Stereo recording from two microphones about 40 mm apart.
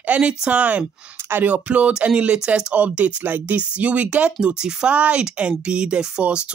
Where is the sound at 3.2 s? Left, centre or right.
Right.